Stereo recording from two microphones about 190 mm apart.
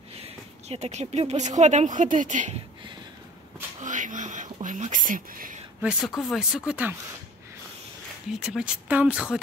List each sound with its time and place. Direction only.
0.7 s speech: 35° right (ahead or behind)
3.8 s whispering: 40° right (ahead or behind)
5.9 s speech: centre (ahead or behind)
8.4 s speech: 5° right (ahead or behind)